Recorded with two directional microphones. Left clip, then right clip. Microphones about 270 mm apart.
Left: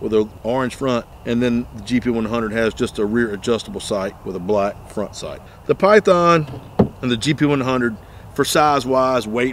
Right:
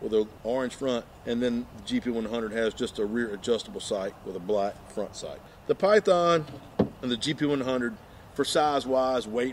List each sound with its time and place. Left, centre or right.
0.1 s speech: left